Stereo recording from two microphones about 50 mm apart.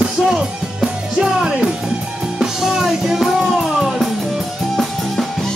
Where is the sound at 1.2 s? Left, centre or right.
Centre.